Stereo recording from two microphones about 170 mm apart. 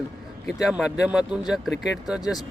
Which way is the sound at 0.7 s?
5° right (ahead or behind).